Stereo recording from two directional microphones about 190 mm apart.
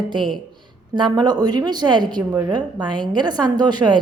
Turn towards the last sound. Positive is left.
turn(degrees=-25)  # may be behind; listen again after turning